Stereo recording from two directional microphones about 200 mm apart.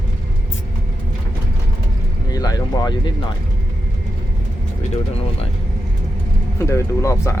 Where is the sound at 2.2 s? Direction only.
20° left (ahead or behind).